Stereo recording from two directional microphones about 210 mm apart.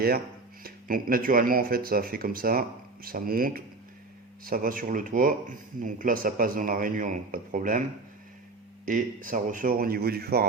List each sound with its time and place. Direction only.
0.6 s speech: 40° right (ahead or behind)
8.9 s speech: 40° right (ahead or behind)